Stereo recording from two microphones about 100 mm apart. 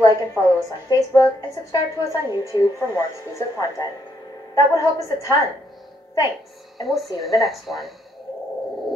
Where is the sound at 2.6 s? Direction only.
30° left (ahead or behind).